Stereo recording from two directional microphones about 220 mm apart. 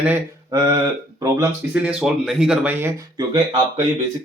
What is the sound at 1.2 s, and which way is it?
Speech, 10° right (ahead or behind).